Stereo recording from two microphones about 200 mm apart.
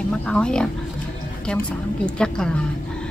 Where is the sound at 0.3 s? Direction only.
5° left (ahead or behind).